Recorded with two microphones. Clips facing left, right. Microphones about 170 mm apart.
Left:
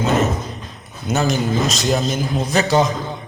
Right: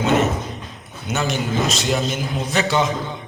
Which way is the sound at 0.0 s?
40° left (ahead or behind).